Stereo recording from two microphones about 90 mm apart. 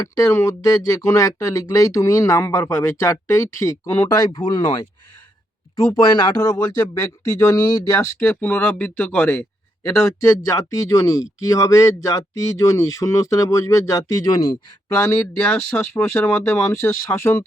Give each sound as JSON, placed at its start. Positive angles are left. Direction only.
{"t": 0.0, "sound": "speech", "side_deg": 35}
{"t": 8.2, "sound": "speech", "side_deg": 15}
{"t": 9.8, "sound": "speech", "side_deg": 35}
{"t": 14.9, "sound": "speech", "side_deg": 25}